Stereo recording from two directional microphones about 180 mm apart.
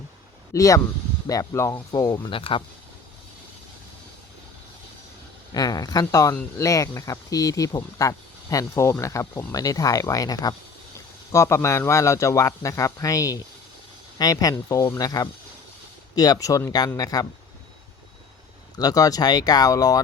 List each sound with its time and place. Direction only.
0.5 s a man's voice: 20° left (ahead or behind)
5.5 s a man's voice: 20° left (ahead or behind)
18.8 s speech: 20° left (ahead or behind)